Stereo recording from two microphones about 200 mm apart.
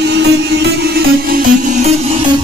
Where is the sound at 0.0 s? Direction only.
55° right (ahead or behind).